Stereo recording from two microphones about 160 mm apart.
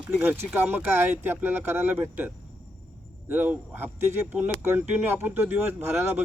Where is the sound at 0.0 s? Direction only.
10° right (ahead or behind).